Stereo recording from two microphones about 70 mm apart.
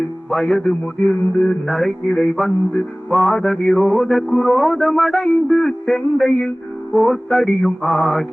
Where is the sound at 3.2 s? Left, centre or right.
Centre.